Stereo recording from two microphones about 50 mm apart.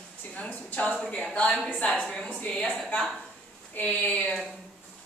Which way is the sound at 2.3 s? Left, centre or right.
Left.